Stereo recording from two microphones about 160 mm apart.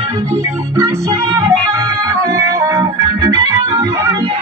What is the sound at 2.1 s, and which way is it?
Music, 20° right (ahead or behind).